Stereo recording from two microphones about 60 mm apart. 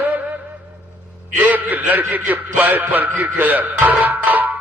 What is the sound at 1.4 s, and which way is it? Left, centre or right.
A man's voice, right.